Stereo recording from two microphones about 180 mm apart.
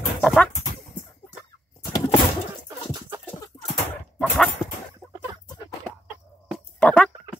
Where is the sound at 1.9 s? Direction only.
20° left (ahead or behind).